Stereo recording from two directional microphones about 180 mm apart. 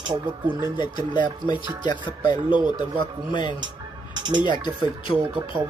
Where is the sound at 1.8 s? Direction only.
25° left (ahead or behind).